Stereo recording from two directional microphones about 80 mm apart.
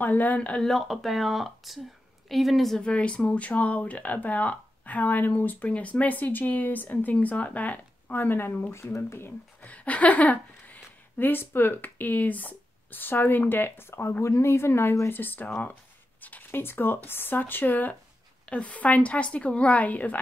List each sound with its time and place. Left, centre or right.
0.0 s speech: left; by 2.9 s centre
2.9 s speech: centre; by 9.3 s left
9.6 s a woman's voice: centre